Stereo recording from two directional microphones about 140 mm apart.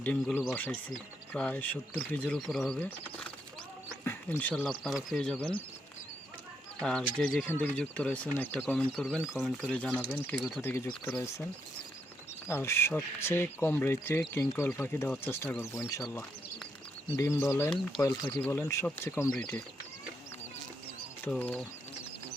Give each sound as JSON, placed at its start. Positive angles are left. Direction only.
{"t": 0.0, "sound": "speech", "side_deg": 10}
{"t": 6.8, "sound": "speech", "side_deg": 5}
{"t": 9.6, "sound": "speech", "side_deg": 10}
{"t": 12.5, "sound": "speech", "side_deg": 20}
{"t": 17.2, "sound": "speech", "side_deg": 20}
{"t": 19.3, "sound": "speech", "side_deg": 5}
{"t": 21.2, "sound": "speech", "side_deg": 10}